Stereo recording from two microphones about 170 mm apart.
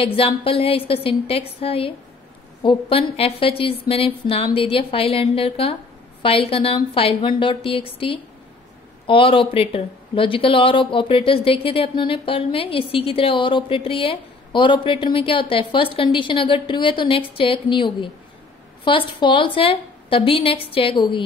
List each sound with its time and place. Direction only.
0.0 s a woman's voice: 30° left (ahead or behind)